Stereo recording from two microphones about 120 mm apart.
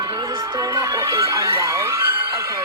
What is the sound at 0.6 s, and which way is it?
Speech, 25° right (ahead or behind).